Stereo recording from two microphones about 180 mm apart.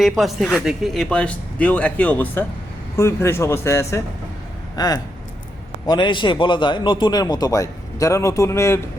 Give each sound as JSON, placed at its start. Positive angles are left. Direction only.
{"t": 0.0, "sound": "a man's voice", "side_deg": 0}